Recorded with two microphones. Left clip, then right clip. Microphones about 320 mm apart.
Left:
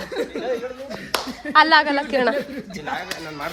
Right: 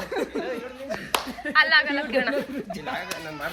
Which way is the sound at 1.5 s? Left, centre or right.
Centre.